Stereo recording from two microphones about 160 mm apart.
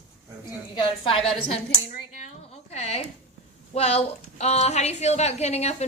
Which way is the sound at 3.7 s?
40° left (ahead or behind).